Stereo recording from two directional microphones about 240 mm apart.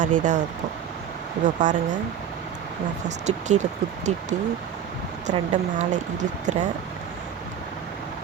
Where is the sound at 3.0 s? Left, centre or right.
Right.